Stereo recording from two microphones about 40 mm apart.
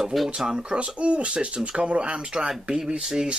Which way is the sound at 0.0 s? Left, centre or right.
Centre.